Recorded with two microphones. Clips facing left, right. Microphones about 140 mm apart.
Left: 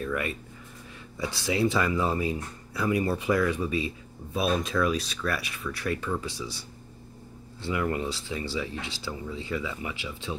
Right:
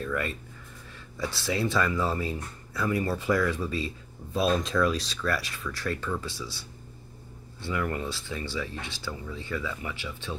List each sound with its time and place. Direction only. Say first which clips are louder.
0.0 s speech: left 1 dB; 10° left (ahead or behind)
4.4 s speech: right 1 dB; 5° left (ahead or behind); by 6.5 s 20° left (ahead or behind)
7.6 s speech: left 2 dB; 20° left (ahead or behind)